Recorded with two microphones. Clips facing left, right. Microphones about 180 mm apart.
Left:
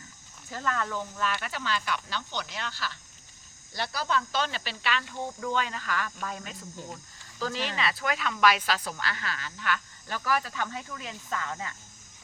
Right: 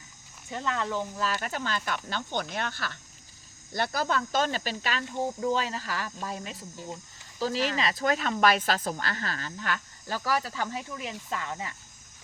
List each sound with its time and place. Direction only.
0.5 s speech: 20° right (ahead or behind)